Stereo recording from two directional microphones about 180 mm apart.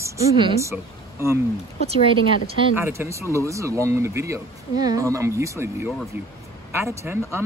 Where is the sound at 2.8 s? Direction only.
15° right (ahead or behind).